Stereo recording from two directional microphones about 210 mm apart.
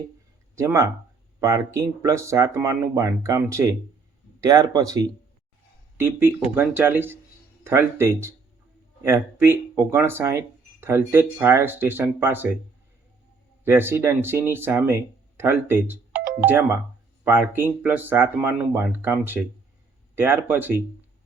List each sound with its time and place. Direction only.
0.5 s speech: 15° right (ahead or behind)
13.7 s speech: 10° right (ahead or behind)